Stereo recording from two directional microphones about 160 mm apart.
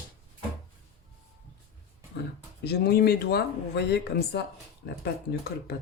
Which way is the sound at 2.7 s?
80° left.